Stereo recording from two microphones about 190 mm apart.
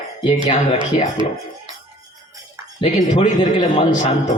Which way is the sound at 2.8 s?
30° left (ahead or behind).